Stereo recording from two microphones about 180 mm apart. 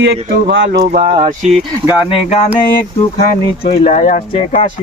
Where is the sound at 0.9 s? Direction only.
35° right (ahead or behind).